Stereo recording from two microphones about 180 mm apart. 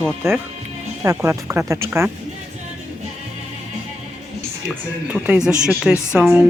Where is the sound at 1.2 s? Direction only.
15° right (ahead or behind).